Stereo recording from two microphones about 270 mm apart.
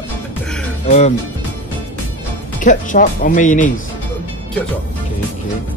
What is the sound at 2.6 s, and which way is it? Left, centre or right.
Speech, left.